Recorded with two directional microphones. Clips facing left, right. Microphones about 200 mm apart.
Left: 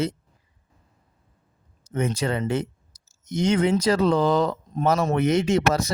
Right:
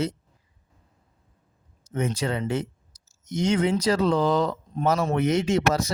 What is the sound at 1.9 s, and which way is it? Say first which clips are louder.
A man's voice: left 2 dB; 55° left (ahead or behind).